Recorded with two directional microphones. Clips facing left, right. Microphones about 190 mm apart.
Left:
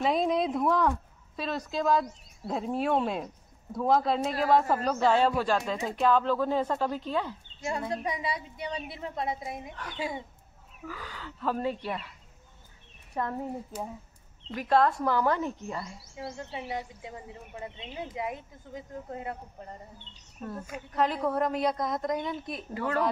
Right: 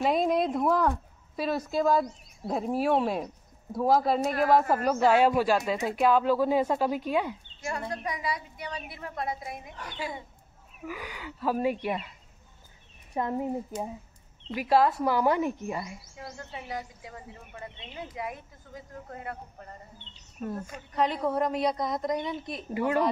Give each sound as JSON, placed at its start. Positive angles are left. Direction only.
{"t": 0.0, "sound": "a woman's voice", "side_deg": 0}
{"t": 7.9, "sound": "speech", "side_deg": 25}
{"t": 10.9, "sound": "speech", "side_deg": -15}
{"t": 13.1, "sound": "speech", "side_deg": -15}
{"t": 14.5, "sound": "speech", "side_deg": -10}
{"t": 16.5, "sound": "speech", "side_deg": 25}
{"t": 20.6, "sound": "a woman's voice", "side_deg": 5}
{"t": 22.8, "sound": "speech", "side_deg": -15}